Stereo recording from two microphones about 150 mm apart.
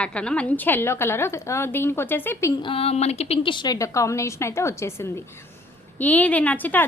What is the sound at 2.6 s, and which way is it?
A woman's voice, 40° left (ahead or behind).